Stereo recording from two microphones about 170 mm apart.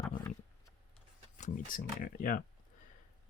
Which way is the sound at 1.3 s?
45° left (ahead or behind).